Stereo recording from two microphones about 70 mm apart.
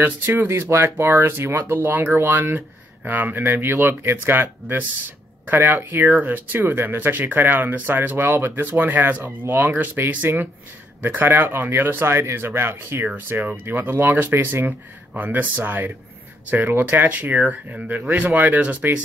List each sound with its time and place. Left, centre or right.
0.0 s speech: right
0.5 s speech: right
13.0 s speech: right